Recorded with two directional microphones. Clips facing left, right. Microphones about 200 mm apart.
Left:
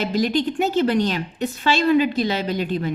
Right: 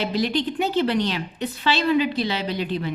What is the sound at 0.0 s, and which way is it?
A woman's voice, 45° left (ahead or behind).